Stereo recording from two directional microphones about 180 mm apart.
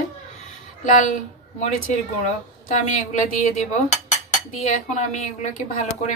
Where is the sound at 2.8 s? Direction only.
40° left (ahead or behind).